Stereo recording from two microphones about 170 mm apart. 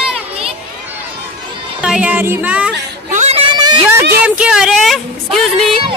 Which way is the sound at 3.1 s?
40° right (ahead or behind).